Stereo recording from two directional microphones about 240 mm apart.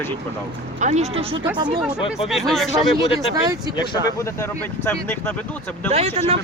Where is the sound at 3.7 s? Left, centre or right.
Centre.